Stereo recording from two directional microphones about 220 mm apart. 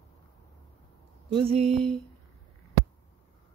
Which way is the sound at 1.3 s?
25° right (ahead or behind).